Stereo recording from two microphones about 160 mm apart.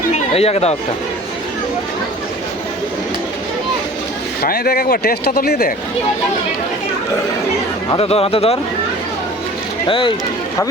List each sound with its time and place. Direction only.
0.3 s speech: 40° left (ahead or behind)
4.4 s speech: 70° left (ahead or behind)
7.9 s speech: 35° left (ahead or behind)
9.8 s speech: 30° left (ahead or behind)